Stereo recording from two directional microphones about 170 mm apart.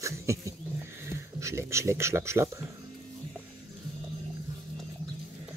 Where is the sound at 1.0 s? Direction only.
15° right (ahead or behind).